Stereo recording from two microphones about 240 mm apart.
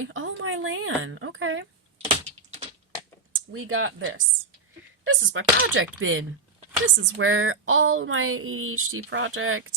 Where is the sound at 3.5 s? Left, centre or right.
Right.